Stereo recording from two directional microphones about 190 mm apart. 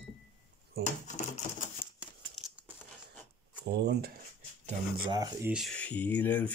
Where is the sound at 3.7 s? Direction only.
55° right (ahead or behind).